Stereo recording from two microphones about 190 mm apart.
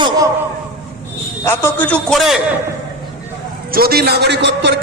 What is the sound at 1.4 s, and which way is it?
A man's voice, 10° left (ahead or behind).